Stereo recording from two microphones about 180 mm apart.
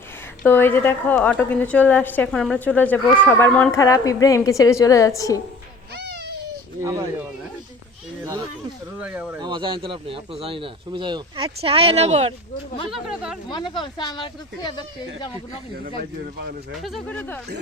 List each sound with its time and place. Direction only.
0.4 s a woman's voice: 10° left (ahead or behind)
6.0 s baby cry: 65° right (ahead or behind)
9.0 s speech: 10° right (ahead or behind)
9.4 s a man's voice: 25° right (ahead or behind)
12.9 s speech: 5° right (ahead or behind)
13.7 s speech: 25° left (ahead or behind)
16.8 s a woman's voice: 5° left (ahead or behind)